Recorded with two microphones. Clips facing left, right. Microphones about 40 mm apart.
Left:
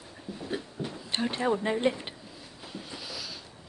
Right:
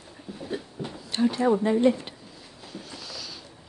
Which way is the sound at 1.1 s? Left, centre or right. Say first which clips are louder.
Right 6 dB; left.